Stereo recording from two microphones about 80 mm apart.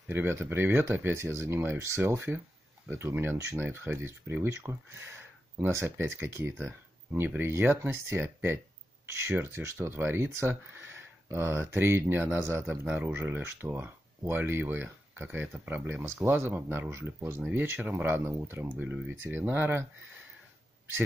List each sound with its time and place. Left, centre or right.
0.1 s speech: right